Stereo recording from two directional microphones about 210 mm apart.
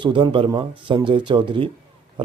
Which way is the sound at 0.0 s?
25° right (ahead or behind).